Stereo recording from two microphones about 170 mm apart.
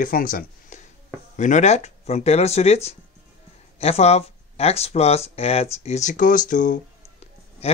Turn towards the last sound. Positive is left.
turn(degrees=45)  # may be behind; listen again after turning